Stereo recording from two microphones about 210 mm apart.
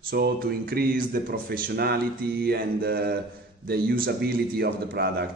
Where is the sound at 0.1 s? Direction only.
45° right (ahead or behind).